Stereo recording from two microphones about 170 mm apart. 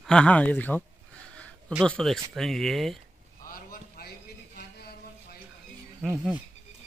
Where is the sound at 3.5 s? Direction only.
60° left (ahead or behind).